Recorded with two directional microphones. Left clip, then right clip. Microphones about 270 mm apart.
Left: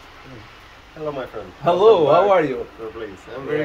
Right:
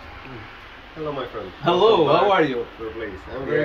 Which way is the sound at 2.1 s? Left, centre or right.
Left.